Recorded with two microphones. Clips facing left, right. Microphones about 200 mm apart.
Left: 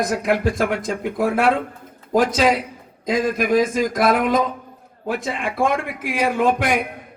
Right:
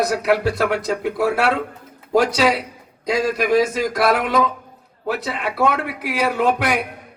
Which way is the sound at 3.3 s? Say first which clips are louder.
Right 1 dB; 50° left (ahead or behind).